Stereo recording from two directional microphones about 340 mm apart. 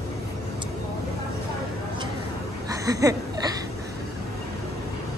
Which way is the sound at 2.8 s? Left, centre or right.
Centre.